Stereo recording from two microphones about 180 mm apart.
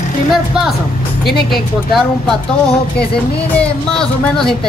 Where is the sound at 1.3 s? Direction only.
60° left (ahead or behind).